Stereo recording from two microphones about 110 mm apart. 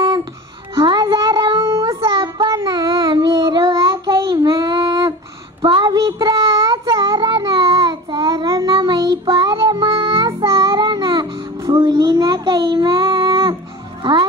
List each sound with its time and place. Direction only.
0.0 s music: 45° right (ahead or behind)
1.6 s child singing: 30° right (ahead or behind)
5.6 s a sound: 50° right (ahead or behind)
5.9 s child singing: 35° right (ahead or behind)